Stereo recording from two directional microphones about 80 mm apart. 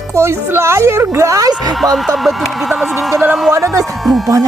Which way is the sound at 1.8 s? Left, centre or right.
Centre.